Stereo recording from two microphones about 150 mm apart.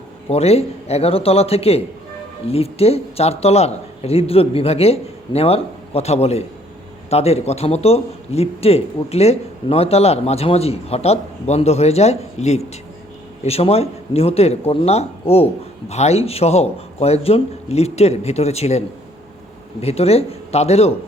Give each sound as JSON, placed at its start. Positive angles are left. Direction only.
{"t": 0.3, "sound": "a man's voice", "side_deg": 45}
{"t": 19.8, "sound": "a man's voice", "side_deg": 45}